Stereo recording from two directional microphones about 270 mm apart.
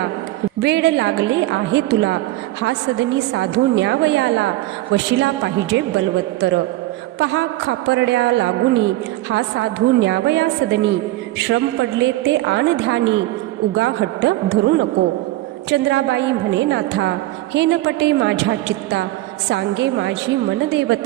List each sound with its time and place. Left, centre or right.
0.6 s a woman's voice: right